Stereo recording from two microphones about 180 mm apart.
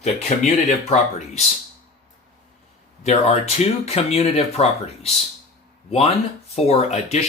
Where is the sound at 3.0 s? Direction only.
35° left (ahead or behind).